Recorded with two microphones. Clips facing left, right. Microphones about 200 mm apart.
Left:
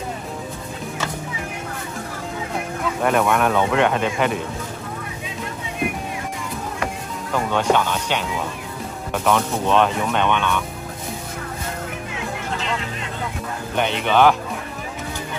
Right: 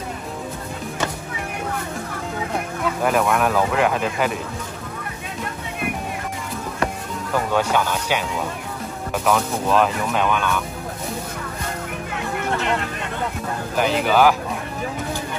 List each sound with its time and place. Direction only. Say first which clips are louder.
3.0 s speech: left 1 dB; centre (ahead or behind)
7.3 s speech: left 1 dB; 5° right (ahead or behind)
12.4 s music: right 5 dB; 60° right (ahead or behind)
13.7 s speech: even; centre (ahead or behind)